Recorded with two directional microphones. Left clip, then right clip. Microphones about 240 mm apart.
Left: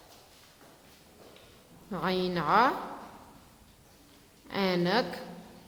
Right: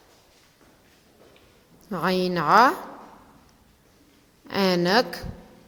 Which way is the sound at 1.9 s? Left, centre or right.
Right.